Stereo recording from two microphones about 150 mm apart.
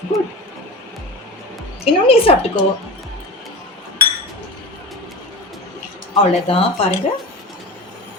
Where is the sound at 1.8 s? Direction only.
40° left (ahead or behind).